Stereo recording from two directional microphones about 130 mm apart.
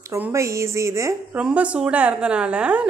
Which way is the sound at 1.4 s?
10° right (ahead or behind).